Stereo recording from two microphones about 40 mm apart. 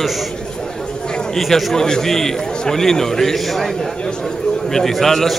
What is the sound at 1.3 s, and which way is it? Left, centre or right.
A man's voice, centre.